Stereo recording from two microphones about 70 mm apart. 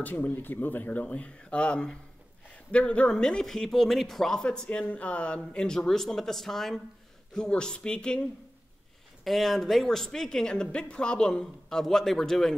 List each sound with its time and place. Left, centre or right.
0.0 s speech: left
9.2 s speech: centre